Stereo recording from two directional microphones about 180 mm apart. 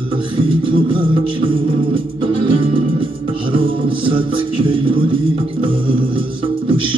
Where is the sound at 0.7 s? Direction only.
30° right (ahead or behind).